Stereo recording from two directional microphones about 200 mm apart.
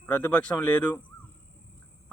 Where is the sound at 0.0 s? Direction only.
10° left (ahead or behind).